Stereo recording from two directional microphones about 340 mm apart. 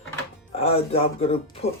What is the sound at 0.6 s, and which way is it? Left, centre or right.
Speech, centre.